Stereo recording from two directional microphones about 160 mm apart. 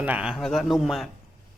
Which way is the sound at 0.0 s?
10° right (ahead or behind).